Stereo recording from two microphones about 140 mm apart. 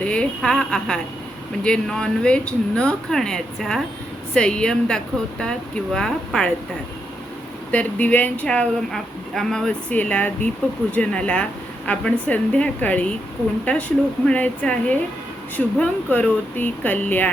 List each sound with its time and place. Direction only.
0.0 s speech: 10° left (ahead or behind)
7.7 s speech: 10° left (ahead or behind)